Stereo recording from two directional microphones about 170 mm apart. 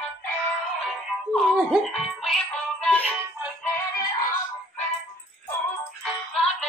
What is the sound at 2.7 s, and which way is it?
Music, 5° left (ahead or behind).